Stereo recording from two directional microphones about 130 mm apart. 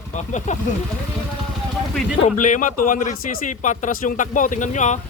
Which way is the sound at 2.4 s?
80° left.